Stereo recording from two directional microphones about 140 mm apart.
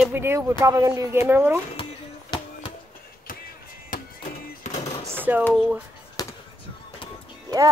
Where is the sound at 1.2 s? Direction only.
15° right (ahead or behind).